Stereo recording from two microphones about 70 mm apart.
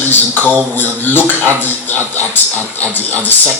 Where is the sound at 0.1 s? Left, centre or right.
Left.